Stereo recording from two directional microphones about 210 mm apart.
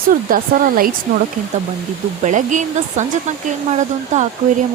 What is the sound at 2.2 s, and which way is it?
A woman's voice, 35° right (ahead or behind).